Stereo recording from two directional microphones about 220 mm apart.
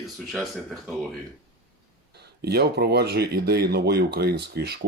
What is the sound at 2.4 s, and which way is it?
Speech, 45° right (ahead or behind).